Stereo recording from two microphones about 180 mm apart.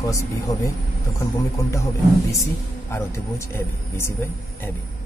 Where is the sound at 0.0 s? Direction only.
15° left (ahead or behind).